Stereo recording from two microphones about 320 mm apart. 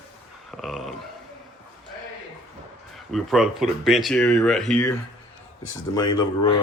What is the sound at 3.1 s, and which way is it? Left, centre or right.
Speech, centre.